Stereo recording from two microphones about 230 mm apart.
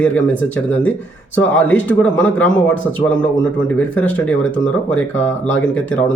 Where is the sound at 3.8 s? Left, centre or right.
Centre.